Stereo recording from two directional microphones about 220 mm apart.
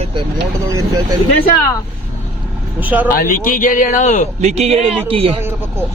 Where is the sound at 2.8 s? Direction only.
5° right (ahead or behind).